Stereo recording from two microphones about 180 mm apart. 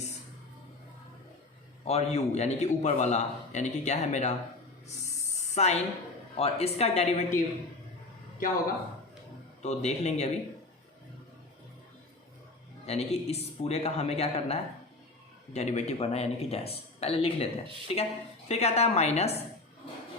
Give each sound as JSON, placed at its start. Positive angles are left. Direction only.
{"t": 1.8, "sound": "a man's voice", "side_deg": 35}
{"t": 5.5, "sound": "a man's voice", "side_deg": 40}
{"t": 9.6, "sound": "a man's voice", "side_deg": 35}
{"t": 12.8, "sound": "a man's voice", "side_deg": 35}